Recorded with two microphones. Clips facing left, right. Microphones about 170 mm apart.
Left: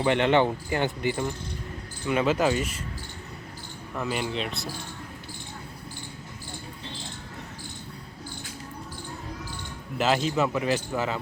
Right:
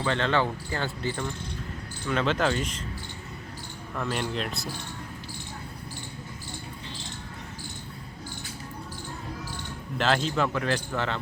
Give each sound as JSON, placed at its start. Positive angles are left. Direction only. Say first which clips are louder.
{"t": 0.0, "sound": "speech", "louder": "left 4 dB", "side_deg": 20}
{"t": 3.9, "sound": "speech", "louder": "left 1 dB", "side_deg": 5}
{"t": 10.0, "sound": "speech", "louder": "left 1 dB", "side_deg": 5}